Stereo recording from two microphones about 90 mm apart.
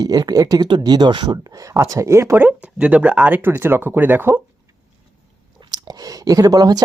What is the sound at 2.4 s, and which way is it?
Speech, 20° right (ahead or behind).